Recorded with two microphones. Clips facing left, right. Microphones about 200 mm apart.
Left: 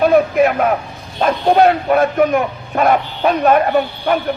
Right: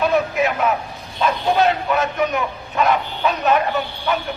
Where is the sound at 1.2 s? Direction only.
55° left (ahead or behind).